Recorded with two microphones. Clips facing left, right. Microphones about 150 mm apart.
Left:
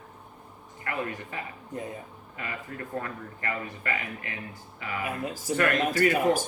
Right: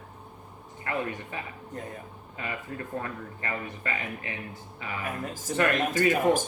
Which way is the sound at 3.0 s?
25° right (ahead or behind).